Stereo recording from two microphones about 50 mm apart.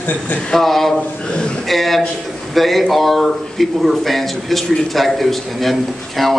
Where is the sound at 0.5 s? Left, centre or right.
Centre.